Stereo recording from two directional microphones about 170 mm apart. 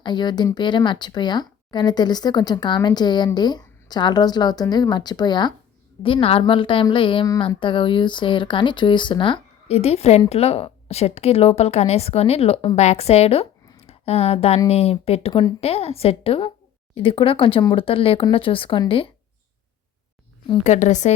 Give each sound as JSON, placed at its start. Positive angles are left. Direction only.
{"t": 0.0, "sound": "speech", "side_deg": 25}
{"t": 15.3, "sound": "speech", "side_deg": 25}
{"t": 15.6, "sound": "speech", "side_deg": 35}
{"t": 20.7, "sound": "speech", "side_deg": 45}